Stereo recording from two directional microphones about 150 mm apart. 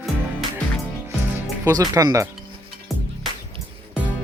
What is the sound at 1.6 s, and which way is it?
Speech, 25° right (ahead or behind).